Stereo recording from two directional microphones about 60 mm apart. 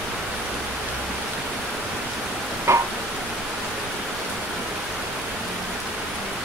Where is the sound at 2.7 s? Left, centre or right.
Right.